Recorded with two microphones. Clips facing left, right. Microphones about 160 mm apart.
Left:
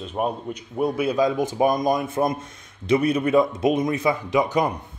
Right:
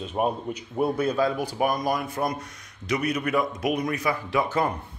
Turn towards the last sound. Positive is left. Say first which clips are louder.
# left 3 dB
turn(degrees=15)  # may be behind; listen again after turning